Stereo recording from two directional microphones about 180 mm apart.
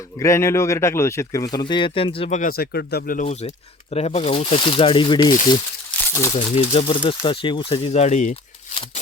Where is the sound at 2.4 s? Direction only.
55° left (ahead or behind).